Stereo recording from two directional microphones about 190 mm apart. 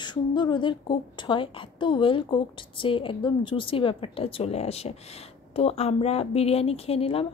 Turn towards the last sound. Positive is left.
turn(degrees=30)  # may be behind; listen again after turning